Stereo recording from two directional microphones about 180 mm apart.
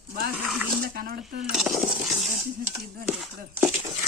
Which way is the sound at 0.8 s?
55° right (ahead or behind).